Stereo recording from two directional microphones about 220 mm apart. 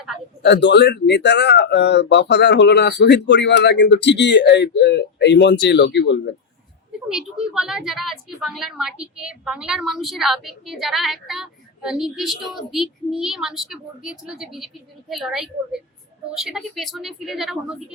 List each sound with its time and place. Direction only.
0.4 s speech: 50° left (ahead or behind)
7.1 s a woman's voice: 5° right (ahead or behind)